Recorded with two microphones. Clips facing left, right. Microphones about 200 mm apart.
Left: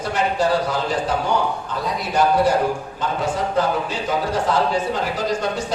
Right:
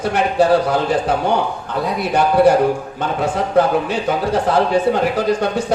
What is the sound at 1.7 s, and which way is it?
Speech, 60° right (ahead or behind).